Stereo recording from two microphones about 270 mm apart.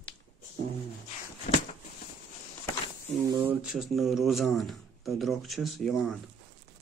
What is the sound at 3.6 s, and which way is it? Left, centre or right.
Speech, centre.